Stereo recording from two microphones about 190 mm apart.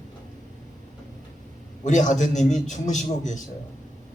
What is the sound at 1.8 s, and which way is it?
A woman's voice, 40° left (ahead or behind).